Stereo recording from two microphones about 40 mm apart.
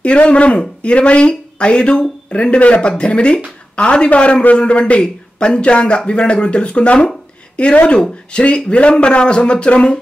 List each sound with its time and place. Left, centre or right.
0.0 s speech: left